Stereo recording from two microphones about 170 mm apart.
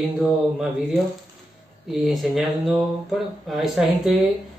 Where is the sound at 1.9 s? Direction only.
Centre (ahead or behind).